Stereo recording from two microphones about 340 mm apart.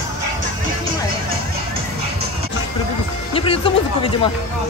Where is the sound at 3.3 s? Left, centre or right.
Centre.